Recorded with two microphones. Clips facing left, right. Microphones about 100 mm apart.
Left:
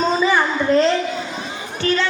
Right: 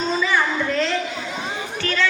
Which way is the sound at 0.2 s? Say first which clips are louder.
Left 3 dB; 30° left (ahead or behind).